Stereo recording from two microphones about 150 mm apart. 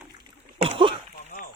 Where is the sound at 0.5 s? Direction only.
40° right (ahead or behind).